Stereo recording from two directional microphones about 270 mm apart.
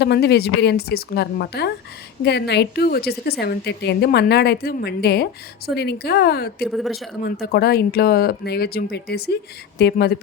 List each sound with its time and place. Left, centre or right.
0.0 s a woman's voice: left
6.7 s speech: centre
7.3 s a woman's voice: left